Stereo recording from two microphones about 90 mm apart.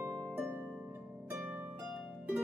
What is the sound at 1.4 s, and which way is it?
Harp, 15° right (ahead or behind).